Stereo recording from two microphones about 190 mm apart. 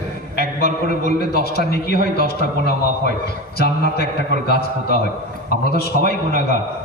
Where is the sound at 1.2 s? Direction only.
55° left (ahead or behind).